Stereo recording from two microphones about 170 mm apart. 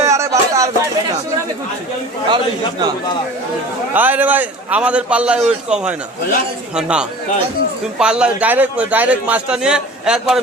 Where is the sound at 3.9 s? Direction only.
10° right (ahead or behind).